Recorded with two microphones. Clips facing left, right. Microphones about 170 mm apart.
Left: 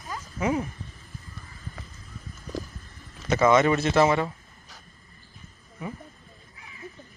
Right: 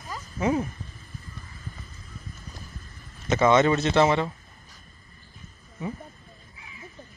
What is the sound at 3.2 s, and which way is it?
Speech, 20° right (ahead or behind).